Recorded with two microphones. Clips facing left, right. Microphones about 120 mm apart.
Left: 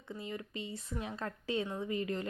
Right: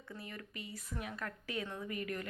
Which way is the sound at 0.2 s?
20° left (ahead or behind).